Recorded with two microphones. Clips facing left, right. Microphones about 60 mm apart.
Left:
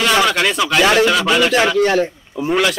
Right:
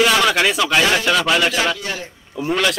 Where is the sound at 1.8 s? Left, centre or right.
Left.